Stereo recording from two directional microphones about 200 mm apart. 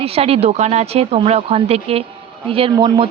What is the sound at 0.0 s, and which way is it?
Speech, 30° right (ahead or behind).